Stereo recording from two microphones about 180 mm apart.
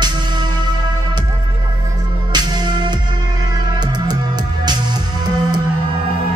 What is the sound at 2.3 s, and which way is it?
Music, 25° right (ahead or behind).